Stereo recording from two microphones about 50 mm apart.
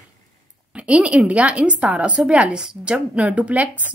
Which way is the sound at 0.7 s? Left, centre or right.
Right.